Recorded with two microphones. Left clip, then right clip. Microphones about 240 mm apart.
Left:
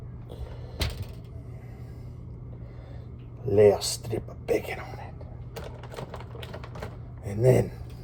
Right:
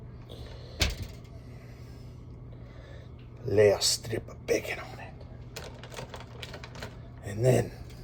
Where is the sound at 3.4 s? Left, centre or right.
Centre.